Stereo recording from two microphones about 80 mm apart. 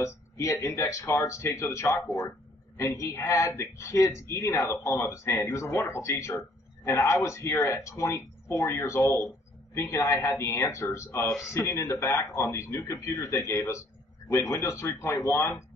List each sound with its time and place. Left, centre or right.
0.0 s a woman's voice: left